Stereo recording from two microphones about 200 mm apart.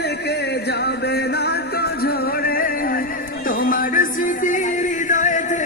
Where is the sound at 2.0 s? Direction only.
50° left (ahead or behind).